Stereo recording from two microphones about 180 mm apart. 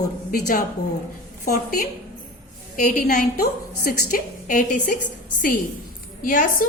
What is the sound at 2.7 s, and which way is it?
A woman's voice, 45° left (ahead or behind).